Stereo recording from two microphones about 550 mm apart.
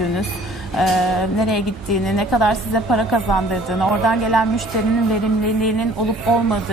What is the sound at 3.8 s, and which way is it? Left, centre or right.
Speech, centre.